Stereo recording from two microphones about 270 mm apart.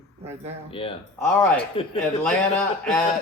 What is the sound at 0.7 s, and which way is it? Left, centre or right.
Speech, centre.